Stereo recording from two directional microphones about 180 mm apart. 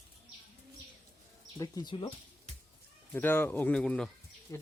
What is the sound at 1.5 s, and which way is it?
Speech, 25° left (ahead or behind).